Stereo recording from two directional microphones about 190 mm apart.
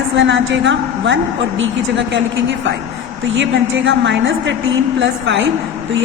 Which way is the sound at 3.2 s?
75° right (ahead or behind).